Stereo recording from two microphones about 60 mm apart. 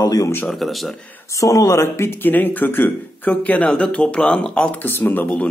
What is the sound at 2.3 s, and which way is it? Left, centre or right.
Speech, left.